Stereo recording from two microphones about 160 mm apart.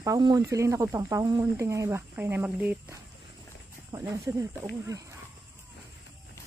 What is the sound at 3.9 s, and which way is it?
Speech, 20° right (ahead or behind).